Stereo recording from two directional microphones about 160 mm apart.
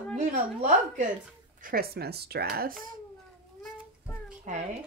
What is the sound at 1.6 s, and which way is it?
Speech, 70° right (ahead or behind).